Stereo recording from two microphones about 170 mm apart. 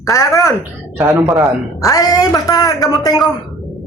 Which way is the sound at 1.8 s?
20° left (ahead or behind).